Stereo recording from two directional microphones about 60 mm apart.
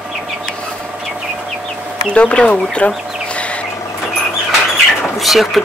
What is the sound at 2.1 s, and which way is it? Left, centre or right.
Speech, left.